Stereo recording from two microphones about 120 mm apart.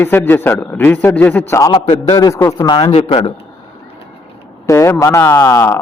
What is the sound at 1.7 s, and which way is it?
Speech, 55° left (ahead or behind).